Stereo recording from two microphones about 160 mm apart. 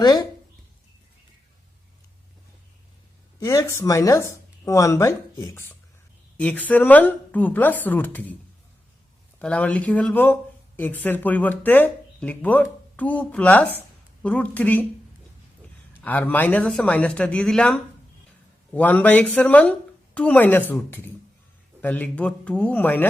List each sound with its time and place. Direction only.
0.0 s speech: 25° left (ahead or behind)
3.4 s a woman's voice: 20° left (ahead or behind)
9.4 s a woman's voice: 5° left (ahead or behind)
16.0 s a woman's voice: 10° left (ahead or behind)